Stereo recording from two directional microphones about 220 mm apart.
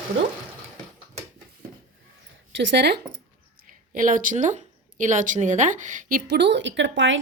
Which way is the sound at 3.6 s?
40° right (ahead or behind).